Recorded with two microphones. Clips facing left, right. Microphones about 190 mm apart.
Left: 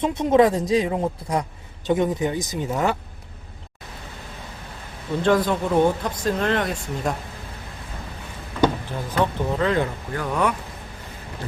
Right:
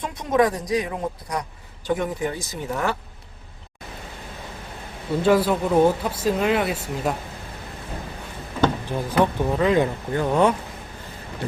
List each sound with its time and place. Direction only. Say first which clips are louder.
0.0 s a man's voice: left 4 dB; 25° left (ahead or behind)
5.2 s speech: right 1 dB; 5° right (ahead or behind)
8.9 s speech: right 3 dB; 15° right (ahead or behind)